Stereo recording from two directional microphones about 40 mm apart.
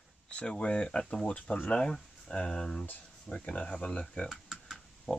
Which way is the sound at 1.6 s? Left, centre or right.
Left.